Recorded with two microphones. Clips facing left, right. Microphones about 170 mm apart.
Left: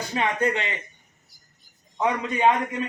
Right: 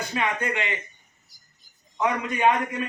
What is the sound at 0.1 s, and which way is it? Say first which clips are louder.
Speech: left 5 dB; 35° left (ahead or behind).